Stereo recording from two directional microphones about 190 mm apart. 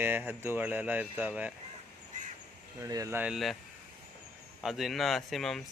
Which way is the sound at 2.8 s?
15° right (ahead or behind).